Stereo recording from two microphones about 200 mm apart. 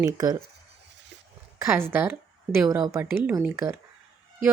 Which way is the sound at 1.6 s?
15° right (ahead or behind).